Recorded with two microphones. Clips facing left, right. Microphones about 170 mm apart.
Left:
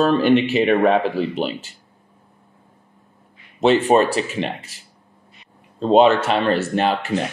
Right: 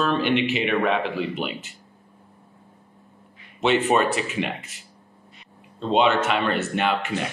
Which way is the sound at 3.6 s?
35° left (ahead or behind).